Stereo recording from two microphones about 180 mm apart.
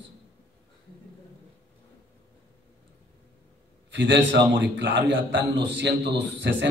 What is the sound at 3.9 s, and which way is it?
A man's voice, 80° right.